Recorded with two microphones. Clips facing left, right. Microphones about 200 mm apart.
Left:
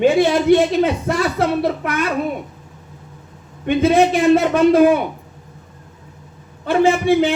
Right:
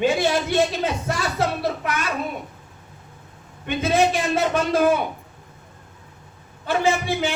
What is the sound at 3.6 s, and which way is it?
Speech, 55° left (ahead or behind).